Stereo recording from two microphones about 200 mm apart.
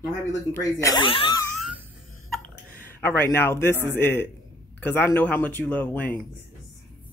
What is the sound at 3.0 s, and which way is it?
Speech, 10° left (ahead or behind).